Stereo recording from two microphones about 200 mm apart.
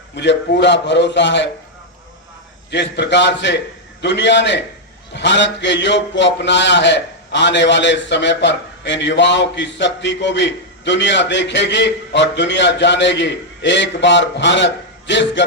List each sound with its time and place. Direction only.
0.2 s a man's voice: 60° left (ahead or behind)
2.6 s a man's voice: 60° left (ahead or behind)